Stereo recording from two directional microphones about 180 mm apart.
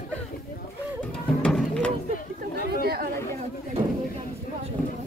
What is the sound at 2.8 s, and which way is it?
Chatter, 60° right (ahead or behind).